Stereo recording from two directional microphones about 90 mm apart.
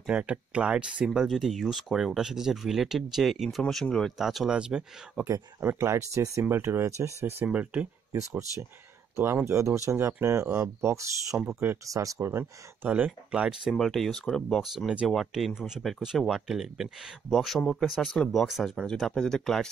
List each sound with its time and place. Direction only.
0.0 s speech: 15° right (ahead or behind)
3.6 s speech: 10° left (ahead or behind); by 5.2 s 10° right (ahead or behind)
5.6 s speech: 25° right (ahead or behind)
7.4 s speech: 15° right (ahead or behind)
9.1 s speech: 30° right (ahead or behind); by 18.5 s 10° left (ahead or behind)
18.5 s speech: 5° right (ahead or behind)